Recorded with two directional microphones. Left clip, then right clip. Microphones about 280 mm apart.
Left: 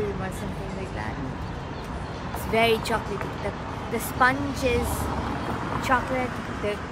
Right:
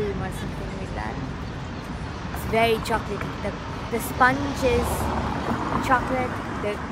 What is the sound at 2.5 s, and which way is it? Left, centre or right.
Speech, centre.